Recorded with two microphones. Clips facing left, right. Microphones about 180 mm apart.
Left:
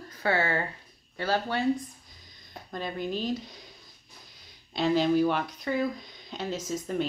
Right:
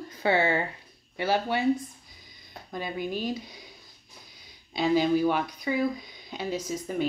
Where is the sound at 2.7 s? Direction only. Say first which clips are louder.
Even; 5° right (ahead or behind).